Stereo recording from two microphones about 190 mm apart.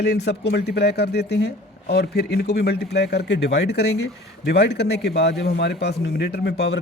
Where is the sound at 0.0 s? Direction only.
60° left (ahead or behind).